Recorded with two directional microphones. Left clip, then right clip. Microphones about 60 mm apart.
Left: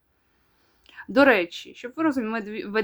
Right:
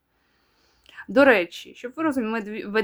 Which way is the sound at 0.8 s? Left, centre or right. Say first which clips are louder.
Right 1 dB; centre.